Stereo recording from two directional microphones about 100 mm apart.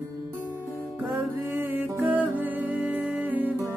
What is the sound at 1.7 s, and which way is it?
Music, 15° right (ahead or behind).